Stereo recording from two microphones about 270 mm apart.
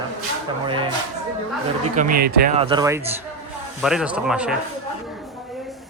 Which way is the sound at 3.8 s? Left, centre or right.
Centre.